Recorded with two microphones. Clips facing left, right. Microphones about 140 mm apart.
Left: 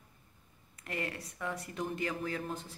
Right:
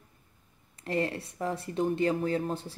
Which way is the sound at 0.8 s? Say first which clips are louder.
Right 9 dB; 30° right (ahead or behind).